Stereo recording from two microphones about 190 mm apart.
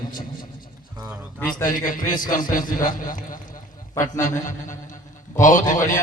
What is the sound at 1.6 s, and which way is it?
A man's voice, 45° left (ahead or behind).